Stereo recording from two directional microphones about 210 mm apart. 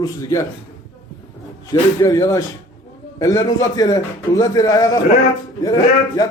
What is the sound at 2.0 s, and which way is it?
A man's voice, 15° left (ahead or behind).